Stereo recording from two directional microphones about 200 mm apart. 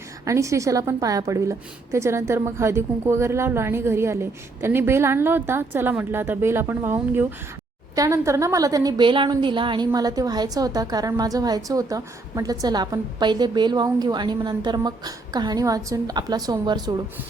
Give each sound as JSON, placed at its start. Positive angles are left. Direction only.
{"t": 0.3, "sound": "a woman's voice", "side_deg": -15}